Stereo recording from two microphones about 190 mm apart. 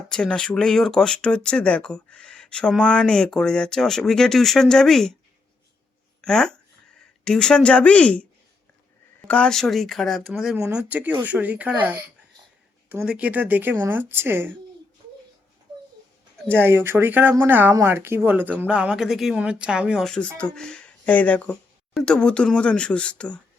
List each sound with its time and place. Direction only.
0.1 s speech: 5° left (ahead or behind)
6.2 s speech: 5° left (ahead or behind)
16.5 s speech: 10° right (ahead or behind); by 23.4 s 5° left (ahead or behind)